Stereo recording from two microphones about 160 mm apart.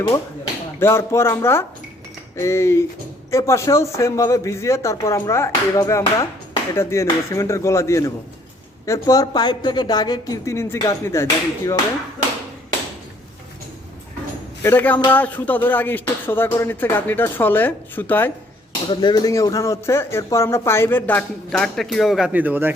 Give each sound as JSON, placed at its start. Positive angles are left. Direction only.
{"t": 0.8, "sound": "a woman's voice", "side_deg": 15}
{"t": 14.6, "sound": "speech", "side_deg": 15}
{"t": 18.9, "sound": "speech", "side_deg": 25}